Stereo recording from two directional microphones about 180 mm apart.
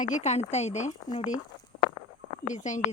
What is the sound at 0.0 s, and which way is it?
A woman's voice, 40° left (ahead or behind).